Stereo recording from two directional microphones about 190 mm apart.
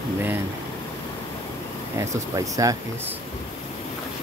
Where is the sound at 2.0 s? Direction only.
15° right (ahead or behind).